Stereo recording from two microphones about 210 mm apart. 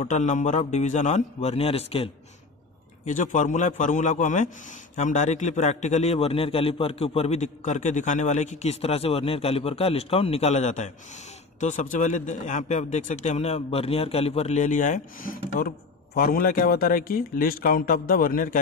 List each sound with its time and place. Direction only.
0.0 s a man's voice: 35° left (ahead or behind)
3.1 s a man's voice: 35° left (ahead or behind)